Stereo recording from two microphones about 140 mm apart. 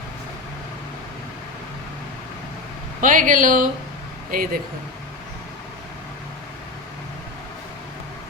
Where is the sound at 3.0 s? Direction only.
70° right (ahead or behind).